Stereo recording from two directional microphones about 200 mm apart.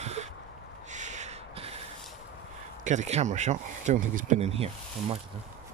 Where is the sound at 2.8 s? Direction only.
35° right (ahead or behind).